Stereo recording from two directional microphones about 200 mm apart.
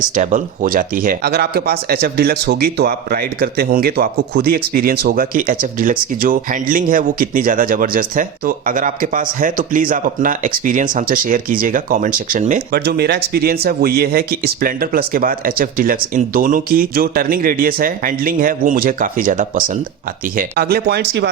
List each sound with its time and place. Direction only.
0.0 s speech: 40° right (ahead or behind)
12.8 s speech: 55° right (ahead or behind)